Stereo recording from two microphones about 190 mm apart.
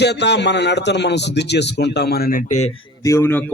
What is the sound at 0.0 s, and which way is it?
A man's voice, 65° left (ahead or behind).